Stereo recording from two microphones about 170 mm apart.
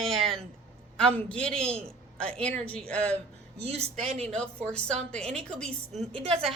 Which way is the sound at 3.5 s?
40° right (ahead or behind).